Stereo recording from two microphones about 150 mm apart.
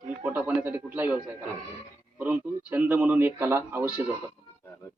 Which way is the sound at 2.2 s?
10° right (ahead or behind).